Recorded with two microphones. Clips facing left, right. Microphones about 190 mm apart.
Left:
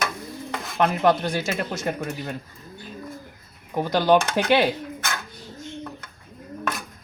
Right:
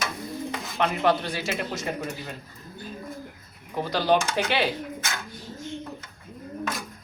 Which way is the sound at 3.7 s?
50° left (ahead or behind).